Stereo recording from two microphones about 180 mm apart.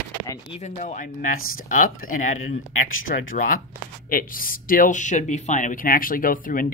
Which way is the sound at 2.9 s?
90° left.